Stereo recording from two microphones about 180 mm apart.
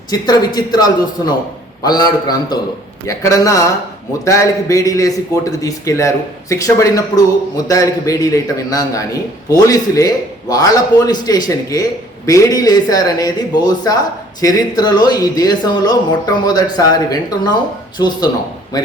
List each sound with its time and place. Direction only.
0.1 s a man's voice: 20° left (ahead or behind)